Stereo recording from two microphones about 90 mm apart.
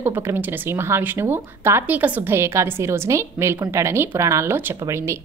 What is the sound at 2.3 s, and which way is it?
A woman's voice, 30° right (ahead or behind).